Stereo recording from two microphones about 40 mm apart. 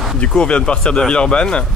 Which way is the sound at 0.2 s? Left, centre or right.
Left.